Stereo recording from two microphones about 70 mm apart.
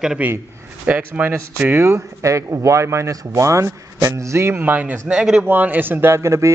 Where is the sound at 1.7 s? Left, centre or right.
Right.